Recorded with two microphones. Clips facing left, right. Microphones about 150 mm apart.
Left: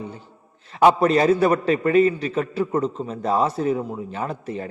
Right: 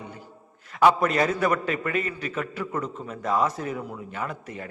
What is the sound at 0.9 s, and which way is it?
A man's voice, 30° left (ahead or behind).